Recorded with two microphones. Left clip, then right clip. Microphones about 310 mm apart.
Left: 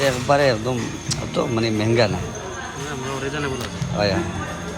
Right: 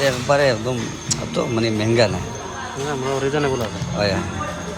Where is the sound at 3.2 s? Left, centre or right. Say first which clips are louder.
Right 6 dB; right.